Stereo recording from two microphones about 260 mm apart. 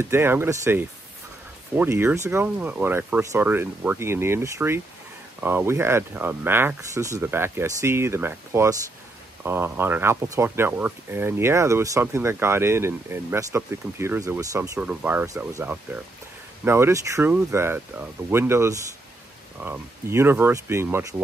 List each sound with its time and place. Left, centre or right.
0.0 s speech: centre